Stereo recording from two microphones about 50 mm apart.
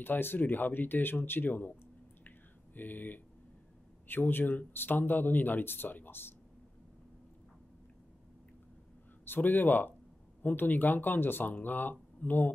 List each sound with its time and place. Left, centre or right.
0.0 s speech: left
2.2 s a sound: left
4.1 s speech: left
9.2 s speech: left